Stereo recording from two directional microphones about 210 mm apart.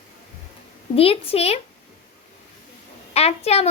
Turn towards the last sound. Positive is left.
turn(degrees=30)  # may be behind; listen again after turning